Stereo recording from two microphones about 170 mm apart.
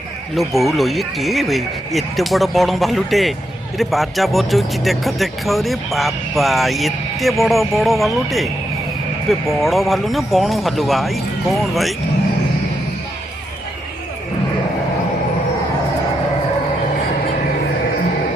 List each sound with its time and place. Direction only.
0.3 s speech: centre (ahead or behind)
9.5 s speech: centre (ahead or behind)